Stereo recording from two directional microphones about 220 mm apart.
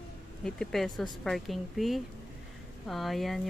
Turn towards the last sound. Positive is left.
turn(degrees=0)  # may be behind; listen again after turning